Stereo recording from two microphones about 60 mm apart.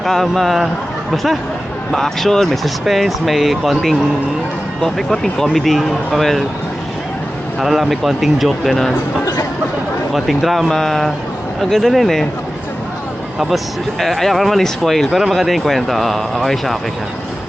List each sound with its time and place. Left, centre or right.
0.0 s speech: centre
7.6 s speech: centre
9.2 s a sound: left
10.1 s speech: centre
14.0 s speech: centre